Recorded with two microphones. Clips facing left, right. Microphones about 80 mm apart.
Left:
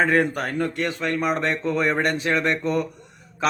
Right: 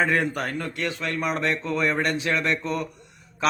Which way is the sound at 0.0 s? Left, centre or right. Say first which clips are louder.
Left 3 dB; left.